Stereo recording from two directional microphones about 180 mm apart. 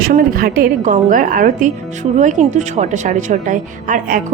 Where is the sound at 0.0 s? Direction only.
50° right (ahead or behind).